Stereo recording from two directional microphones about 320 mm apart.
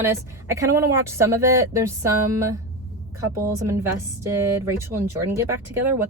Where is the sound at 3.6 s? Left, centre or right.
Centre.